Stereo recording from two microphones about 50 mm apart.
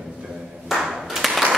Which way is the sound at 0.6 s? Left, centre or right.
Centre.